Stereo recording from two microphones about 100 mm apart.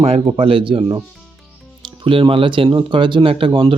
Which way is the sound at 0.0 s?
75° right (ahead or behind).